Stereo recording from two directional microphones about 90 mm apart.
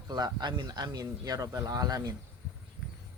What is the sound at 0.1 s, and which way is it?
Speech, 50° right (ahead or behind).